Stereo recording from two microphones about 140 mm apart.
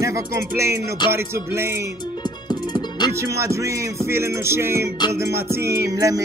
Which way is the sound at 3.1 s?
20° right (ahead or behind).